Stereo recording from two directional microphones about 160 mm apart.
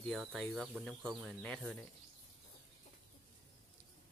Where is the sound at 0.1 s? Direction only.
Centre (ahead or behind).